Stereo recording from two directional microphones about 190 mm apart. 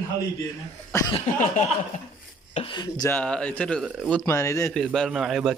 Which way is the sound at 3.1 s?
5° left (ahead or behind).